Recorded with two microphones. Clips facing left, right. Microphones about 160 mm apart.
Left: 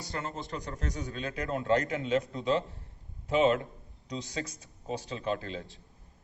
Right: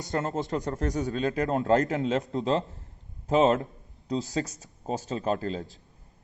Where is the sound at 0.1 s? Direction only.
50° right (ahead or behind).